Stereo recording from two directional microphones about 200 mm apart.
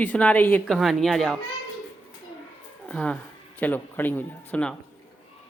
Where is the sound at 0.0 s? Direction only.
5° left (ahead or behind).